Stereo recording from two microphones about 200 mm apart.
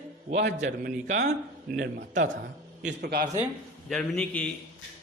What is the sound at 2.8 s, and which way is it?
Speech, 50° right (ahead or behind).